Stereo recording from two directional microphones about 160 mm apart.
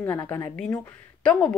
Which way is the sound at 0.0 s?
10° left (ahead or behind).